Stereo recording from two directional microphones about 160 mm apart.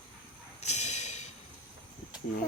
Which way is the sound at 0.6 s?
45° left (ahead or behind).